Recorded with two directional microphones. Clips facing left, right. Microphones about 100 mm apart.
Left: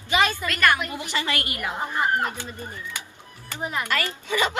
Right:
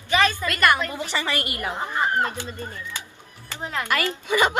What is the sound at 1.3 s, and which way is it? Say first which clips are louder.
Speech: right 1 dB; 25° right (ahead or behind).